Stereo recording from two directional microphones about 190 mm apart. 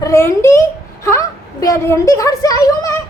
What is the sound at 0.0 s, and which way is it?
A child's voice, 15° left (ahead or behind).